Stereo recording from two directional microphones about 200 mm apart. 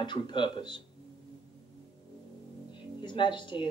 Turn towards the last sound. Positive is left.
turn(degrees=25)  # may be behind; listen again after turning